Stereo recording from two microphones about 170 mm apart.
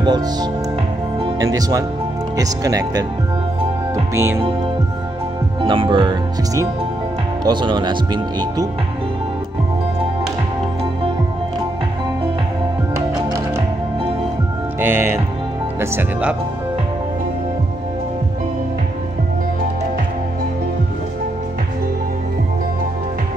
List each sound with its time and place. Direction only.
0.0 s speech: 25° right (ahead or behind)
5.6 s speech: 30° right (ahead or behind)
14.8 s speech: 15° right (ahead or behind)